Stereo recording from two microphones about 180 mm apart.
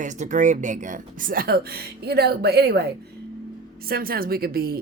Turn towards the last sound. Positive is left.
turn(degrees=-55)  # may be behind; listen again after turning